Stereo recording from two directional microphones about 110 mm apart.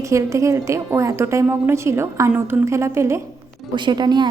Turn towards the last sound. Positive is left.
turn(degrees=-40)  # may be behind; listen again after turning